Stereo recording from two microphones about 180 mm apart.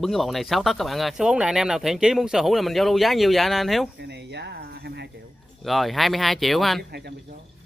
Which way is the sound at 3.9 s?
70° right (ahead or behind).